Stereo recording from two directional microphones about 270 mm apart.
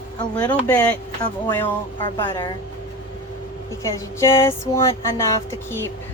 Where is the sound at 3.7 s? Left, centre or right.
Centre.